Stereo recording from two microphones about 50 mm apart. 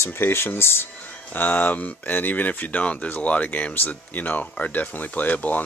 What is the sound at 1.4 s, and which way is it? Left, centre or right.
Speech, left.